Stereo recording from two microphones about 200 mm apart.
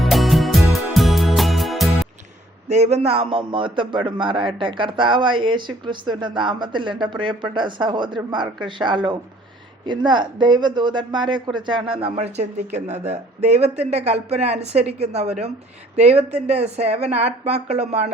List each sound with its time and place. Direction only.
0.0 s music: centre (ahead or behind)
2.6 s a man's voice: 35° right (ahead or behind)